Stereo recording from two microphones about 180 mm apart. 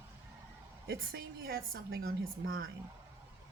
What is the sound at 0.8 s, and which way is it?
A woman's voice, 60° right (ahead or behind).